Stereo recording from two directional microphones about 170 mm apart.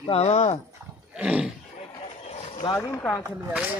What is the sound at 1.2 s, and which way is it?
Speech, 5° right (ahead or behind).